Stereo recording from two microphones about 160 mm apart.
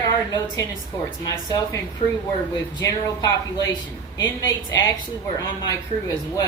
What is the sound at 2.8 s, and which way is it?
Speech, 20° left (ahead or behind).